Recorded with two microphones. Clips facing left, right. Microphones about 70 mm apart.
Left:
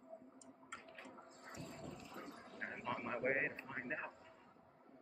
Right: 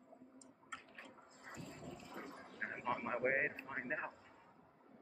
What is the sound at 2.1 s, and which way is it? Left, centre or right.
Dog, right.